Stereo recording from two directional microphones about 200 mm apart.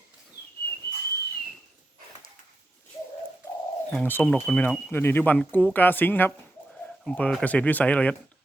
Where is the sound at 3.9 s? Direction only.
5° left (ahead or behind).